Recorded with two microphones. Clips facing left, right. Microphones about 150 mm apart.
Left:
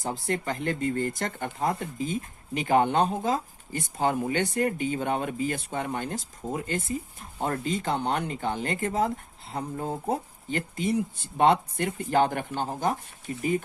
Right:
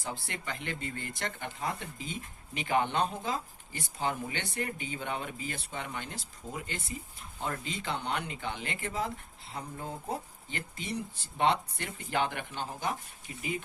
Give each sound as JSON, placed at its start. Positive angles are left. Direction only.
{"t": 0.0, "sound": "speech", "side_deg": 45}